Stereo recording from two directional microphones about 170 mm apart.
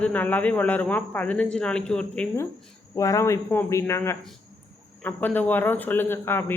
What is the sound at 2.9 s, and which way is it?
A man's voice, 20° left (ahead or behind).